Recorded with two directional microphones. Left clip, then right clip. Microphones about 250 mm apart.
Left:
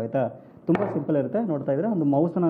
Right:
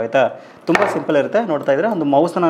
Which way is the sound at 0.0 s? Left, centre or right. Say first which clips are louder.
Right 10 dB; centre.